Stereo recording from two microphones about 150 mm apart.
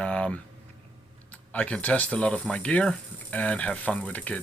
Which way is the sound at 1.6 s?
10° left (ahead or behind).